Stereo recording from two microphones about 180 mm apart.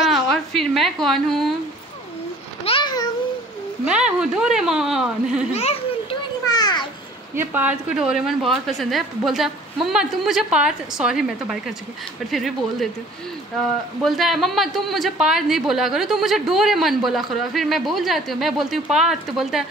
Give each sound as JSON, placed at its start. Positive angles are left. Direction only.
{"t": 0.0, "sound": "a woman's voice", "side_deg": 0}
{"t": 2.6, "sound": "a sound", "side_deg": 30}
{"t": 3.8, "sound": "a woman's voice", "side_deg": -5}
{"t": 5.5, "sound": "a child's voice", "side_deg": 35}
{"t": 6.4, "sound": "a sound", "side_deg": 20}
{"t": 7.3, "sound": "a woman's voice", "side_deg": -10}
{"t": 14.0, "sound": "a woman's voice", "side_deg": 0}